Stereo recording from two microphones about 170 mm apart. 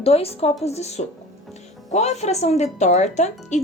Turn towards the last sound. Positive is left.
turn(degrees=45)  # may be behind; listen again after turning